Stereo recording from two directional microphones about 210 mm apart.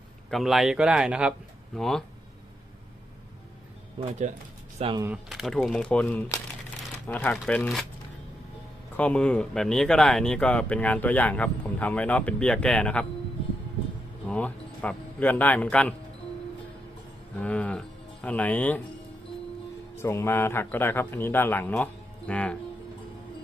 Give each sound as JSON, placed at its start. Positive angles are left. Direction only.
{"t": 0.3, "sound": "speech", "side_deg": 0}
{"t": 4.0, "sound": "speech", "side_deg": -25}
{"t": 5.0, "sound": "speech", "side_deg": -5}
{"t": 9.0, "sound": "speech", "side_deg": 5}
{"t": 14.3, "sound": "a man's voice", "side_deg": 5}
{"t": 17.3, "sound": "speech", "side_deg": 5}
{"t": 20.0, "sound": "a man's voice", "side_deg": 10}